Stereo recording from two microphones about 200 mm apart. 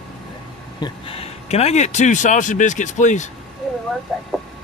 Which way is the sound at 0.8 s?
30° left (ahead or behind).